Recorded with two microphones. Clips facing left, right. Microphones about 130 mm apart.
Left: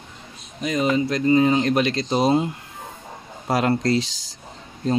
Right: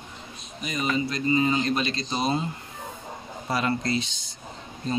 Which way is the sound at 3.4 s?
90° left.